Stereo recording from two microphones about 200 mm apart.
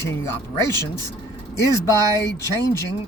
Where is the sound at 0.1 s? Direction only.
10° left (ahead or behind).